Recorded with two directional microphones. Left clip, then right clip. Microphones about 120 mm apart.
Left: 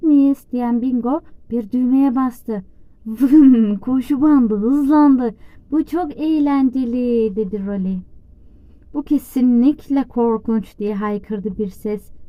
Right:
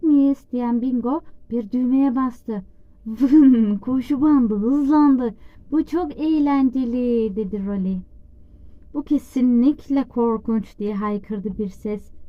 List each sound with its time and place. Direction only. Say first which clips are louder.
0.0 s a woman's voice: left 3 dB; 30° left (ahead or behind)
3.8 s a woman's voice: left 3 dB; 35° left (ahead or behind)
5.7 s a woman's voice: left 2 dB; 20° left (ahead or behind)